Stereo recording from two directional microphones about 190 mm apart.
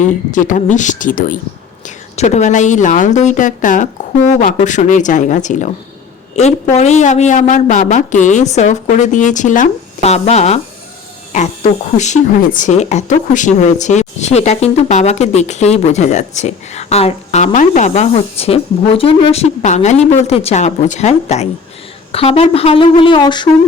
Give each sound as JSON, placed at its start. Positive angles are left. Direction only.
{"t": 0.0, "sound": "speech", "side_deg": 40}